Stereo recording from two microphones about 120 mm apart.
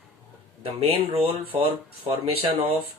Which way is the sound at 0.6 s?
55° right (ahead or behind).